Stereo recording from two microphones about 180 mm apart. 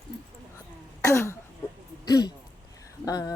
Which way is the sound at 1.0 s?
15° left (ahead or behind).